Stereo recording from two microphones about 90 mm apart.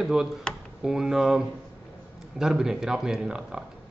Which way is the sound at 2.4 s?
5° right (ahead or behind).